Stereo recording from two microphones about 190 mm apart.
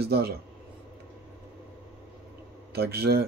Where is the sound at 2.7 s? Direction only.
55° right (ahead or behind).